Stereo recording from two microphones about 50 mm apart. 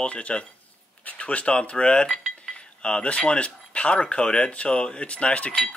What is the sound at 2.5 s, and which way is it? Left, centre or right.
Speech, left.